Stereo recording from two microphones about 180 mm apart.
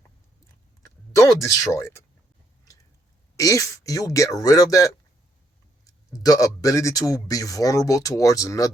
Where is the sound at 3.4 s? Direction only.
20° left (ahead or behind).